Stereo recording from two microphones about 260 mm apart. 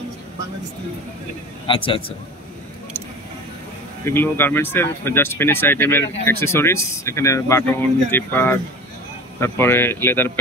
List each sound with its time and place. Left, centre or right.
1.7 s a man's voice: centre
4.0 s speech: centre